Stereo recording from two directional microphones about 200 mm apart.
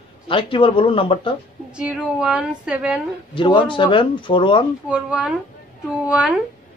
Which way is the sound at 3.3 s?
25° left (ahead or behind).